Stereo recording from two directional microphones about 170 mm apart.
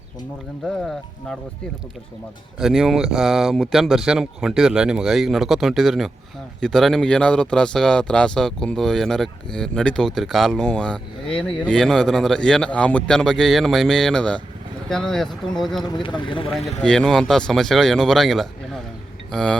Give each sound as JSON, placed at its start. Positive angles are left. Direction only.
{"t": 0.6, "sound": "speech", "side_deg": 5}
{"t": 2.6, "sound": "speech", "side_deg": -5}
{"t": 15.8, "sound": "speech", "side_deg": 25}
{"t": 16.5, "sound": "speech", "side_deg": 0}